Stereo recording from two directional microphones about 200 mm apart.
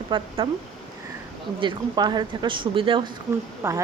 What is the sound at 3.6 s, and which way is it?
Speech, 15° right (ahead or behind).